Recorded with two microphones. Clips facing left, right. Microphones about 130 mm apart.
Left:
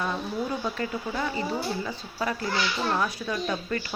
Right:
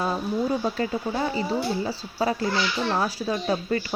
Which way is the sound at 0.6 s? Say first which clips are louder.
Right 4 dB; 35° right (ahead or behind).